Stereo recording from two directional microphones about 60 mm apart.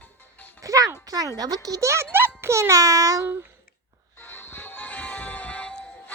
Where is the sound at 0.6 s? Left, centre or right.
Right.